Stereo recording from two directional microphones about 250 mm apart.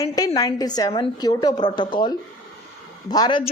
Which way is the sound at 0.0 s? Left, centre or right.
Centre.